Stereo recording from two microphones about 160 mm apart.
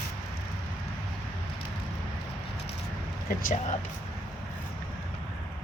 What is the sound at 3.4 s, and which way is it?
Speech, 55° left (ahead or behind).